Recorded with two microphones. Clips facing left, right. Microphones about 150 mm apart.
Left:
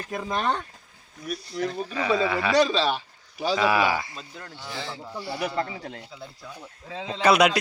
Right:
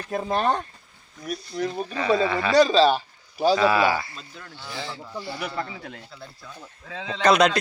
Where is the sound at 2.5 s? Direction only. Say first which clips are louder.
Right 6 dB; 35° right (ahead or behind).